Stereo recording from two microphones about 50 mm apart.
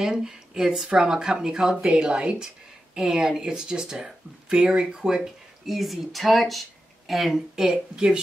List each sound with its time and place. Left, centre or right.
0.0 s speech: centre
5.7 s speech: centre